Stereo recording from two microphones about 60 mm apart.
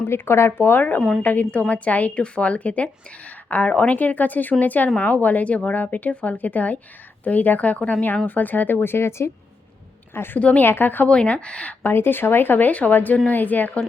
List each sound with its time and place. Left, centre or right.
0.1 s speech: left
0.6 s a woman's voice: left
10.4 s a woman's voice: left
10.7 s speech: left
11.1 s a woman's voice: centre
11.8 s speech: left